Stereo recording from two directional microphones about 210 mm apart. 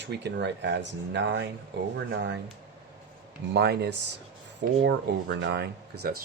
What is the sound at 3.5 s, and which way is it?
Speech, 50° right (ahead or behind).